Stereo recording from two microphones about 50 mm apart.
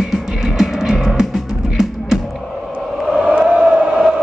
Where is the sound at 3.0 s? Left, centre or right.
Centre.